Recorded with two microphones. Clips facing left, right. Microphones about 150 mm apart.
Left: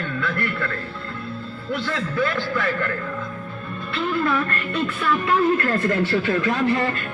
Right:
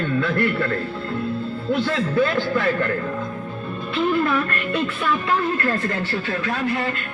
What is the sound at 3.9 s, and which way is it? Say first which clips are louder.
Music: right 3 dB; 10° right (ahead or behind).